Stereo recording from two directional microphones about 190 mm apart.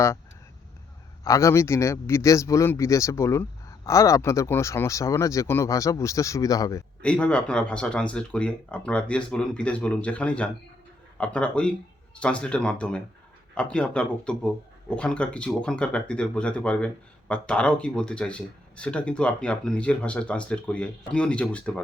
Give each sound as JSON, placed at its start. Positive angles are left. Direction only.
{"t": 1.2, "sound": "a man's voice", "side_deg": 15}
{"t": 7.0, "sound": "speech", "side_deg": 5}